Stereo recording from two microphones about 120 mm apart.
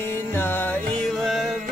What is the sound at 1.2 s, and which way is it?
Music, centre (ahead or behind).